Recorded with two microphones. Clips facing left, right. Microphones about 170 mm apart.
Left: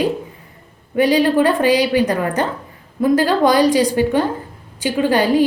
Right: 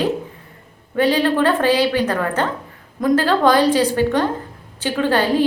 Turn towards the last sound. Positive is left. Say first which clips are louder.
# left 2 dB
turn(degrees=15)  # may be behind; listen again after turning